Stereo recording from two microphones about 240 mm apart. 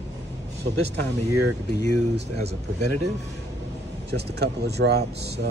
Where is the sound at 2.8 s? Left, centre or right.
Right.